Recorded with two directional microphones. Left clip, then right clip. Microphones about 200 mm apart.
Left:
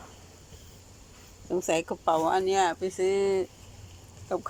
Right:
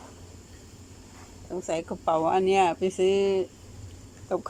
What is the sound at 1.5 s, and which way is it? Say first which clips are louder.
Speech: left 3 dB; 10° left (ahead or behind).